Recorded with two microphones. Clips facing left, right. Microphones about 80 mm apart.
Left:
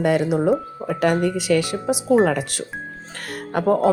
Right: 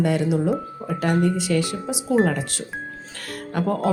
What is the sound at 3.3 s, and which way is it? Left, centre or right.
Music, left.